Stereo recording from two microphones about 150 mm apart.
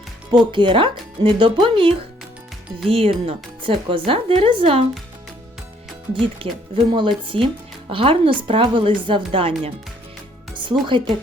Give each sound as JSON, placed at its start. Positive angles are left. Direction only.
{"t": 0.3, "sound": "speech", "side_deg": -30}
{"t": 6.1, "sound": "speech", "side_deg": -35}
{"t": 10.5, "sound": "music", "side_deg": -35}